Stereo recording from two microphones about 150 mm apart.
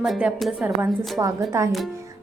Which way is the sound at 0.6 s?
20° right (ahead or behind).